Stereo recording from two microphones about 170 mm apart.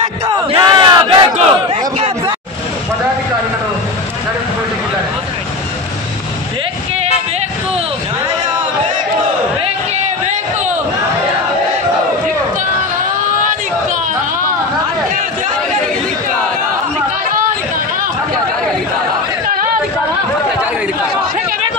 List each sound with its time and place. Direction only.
0.3 s battle cry: 25° right (ahead or behind)